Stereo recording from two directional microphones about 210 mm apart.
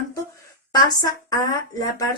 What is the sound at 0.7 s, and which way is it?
Speech, 20° left (ahead or behind).